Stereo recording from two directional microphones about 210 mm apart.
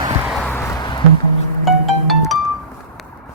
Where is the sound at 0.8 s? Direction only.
20° left (ahead or behind).